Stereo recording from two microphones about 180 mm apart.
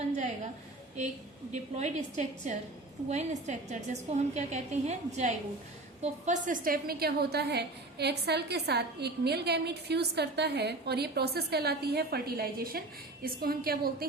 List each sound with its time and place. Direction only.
1.0 s a woman's voice: 40° right (ahead or behind); by 14.1 s 55° right (ahead or behind)